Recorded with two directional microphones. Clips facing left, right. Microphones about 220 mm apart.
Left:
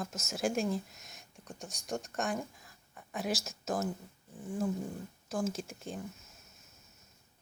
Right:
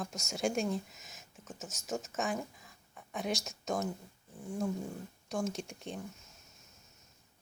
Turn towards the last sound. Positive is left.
turn(degrees=0)  # may be behind; listen again after turning